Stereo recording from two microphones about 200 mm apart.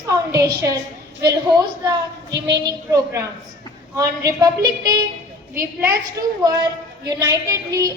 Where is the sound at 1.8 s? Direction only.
20° right (ahead or behind).